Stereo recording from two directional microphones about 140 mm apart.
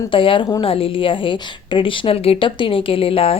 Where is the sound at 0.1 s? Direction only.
40° left (ahead or behind).